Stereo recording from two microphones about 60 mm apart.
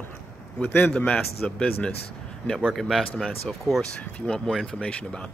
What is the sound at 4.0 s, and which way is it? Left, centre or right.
Speech, left.